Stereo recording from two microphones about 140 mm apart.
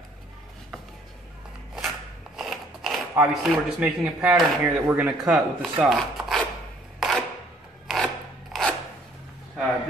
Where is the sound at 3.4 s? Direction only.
5° right (ahead or behind).